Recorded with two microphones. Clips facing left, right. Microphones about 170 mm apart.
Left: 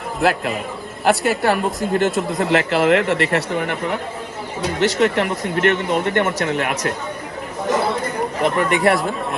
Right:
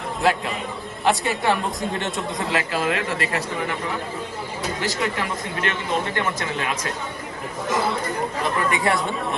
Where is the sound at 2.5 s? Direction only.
70° left (ahead or behind).